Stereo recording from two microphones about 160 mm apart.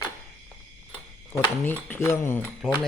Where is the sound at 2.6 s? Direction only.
5° left (ahead or behind).